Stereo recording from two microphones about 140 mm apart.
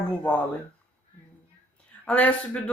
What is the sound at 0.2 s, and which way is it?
Speech, 10° left (ahead or behind).